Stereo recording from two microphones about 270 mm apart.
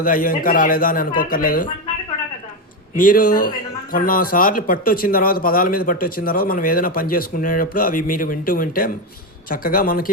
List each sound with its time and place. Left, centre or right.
0.0 s speech: left
2.9 s speech: left